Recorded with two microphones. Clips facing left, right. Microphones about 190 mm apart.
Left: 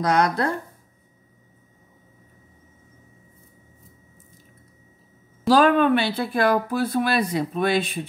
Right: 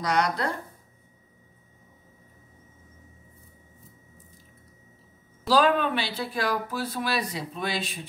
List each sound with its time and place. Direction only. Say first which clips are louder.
0.0 s speech: left 5 dB; 50° left (ahead or behind)
5.5 s speech: left 5 dB; 55° left (ahead or behind)